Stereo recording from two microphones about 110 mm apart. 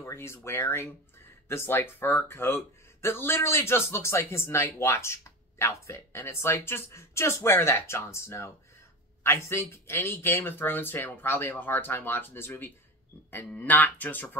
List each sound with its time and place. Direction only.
0.0 s speech: 25° left (ahead or behind)